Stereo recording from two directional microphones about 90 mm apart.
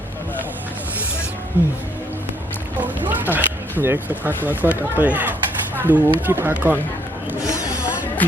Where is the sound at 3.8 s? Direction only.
25° right (ahead or behind).